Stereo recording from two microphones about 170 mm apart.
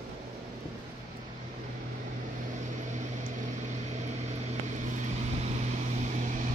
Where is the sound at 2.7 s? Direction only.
45° right (ahead or behind).